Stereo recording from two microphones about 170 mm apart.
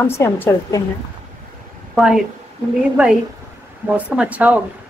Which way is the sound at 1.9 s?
Centre (ahead or behind).